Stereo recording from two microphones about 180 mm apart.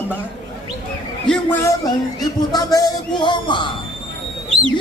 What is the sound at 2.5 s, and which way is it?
A man's voice, 25° left (ahead or behind).